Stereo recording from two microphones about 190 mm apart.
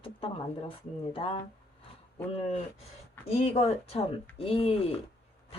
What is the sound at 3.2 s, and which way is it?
Speech, 30° left (ahead or behind).